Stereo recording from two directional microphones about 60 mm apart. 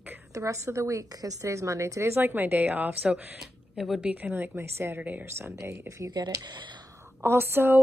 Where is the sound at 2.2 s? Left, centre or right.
Right.